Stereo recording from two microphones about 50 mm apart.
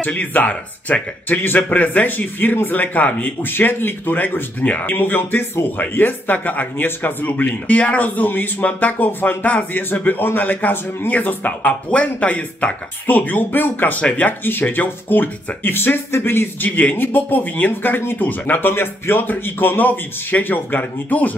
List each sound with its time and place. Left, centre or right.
0.0 s speech: left
3.5 s speech: left
4.9 s speech: left